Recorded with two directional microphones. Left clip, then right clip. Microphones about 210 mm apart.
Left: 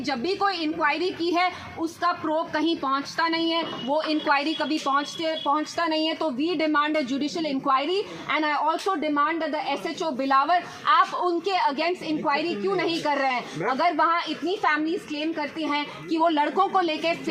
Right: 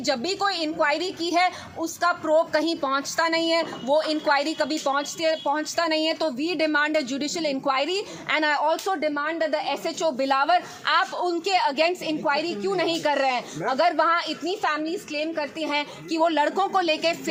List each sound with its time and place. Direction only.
0.0 s a woman's voice: 45° right (ahead or behind)
3.9 s a woman's voice: 25° right (ahead or behind)